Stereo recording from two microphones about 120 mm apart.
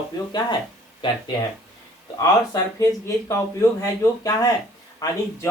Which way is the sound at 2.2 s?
30° left (ahead or behind).